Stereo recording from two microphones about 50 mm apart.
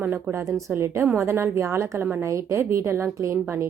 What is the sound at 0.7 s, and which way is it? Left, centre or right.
A woman's voice, right.